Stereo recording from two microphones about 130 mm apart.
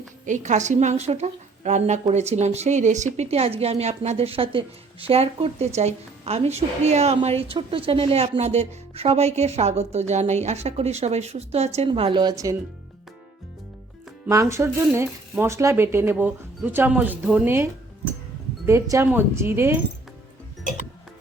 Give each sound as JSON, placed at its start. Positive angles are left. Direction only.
{"t": 0.3, "sound": "a woman's voice", "side_deg": -70}
{"t": 11.9, "sound": "speech", "side_deg": -40}
{"t": 14.3, "sound": "speech", "side_deg": -25}
{"t": 18.6, "sound": "speech", "side_deg": -20}